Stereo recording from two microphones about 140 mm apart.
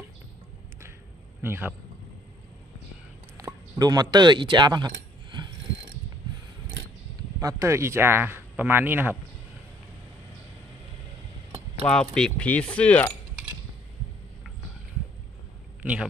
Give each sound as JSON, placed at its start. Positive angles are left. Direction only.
{"t": 1.4, "sound": "speech", "side_deg": -15}
{"t": 3.3, "sound": "a sound", "side_deg": -25}
{"t": 7.3, "sound": "speech", "side_deg": -20}
{"t": 11.8, "sound": "coin", "side_deg": 5}
{"t": 15.8, "sound": "speech", "side_deg": -10}